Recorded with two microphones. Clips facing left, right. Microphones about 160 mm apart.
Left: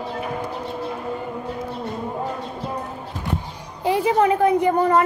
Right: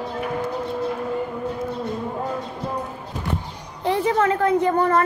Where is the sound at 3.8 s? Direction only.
10° left (ahead or behind).